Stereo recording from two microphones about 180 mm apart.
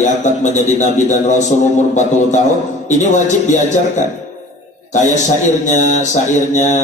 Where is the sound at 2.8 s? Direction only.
40° left (ahead or behind).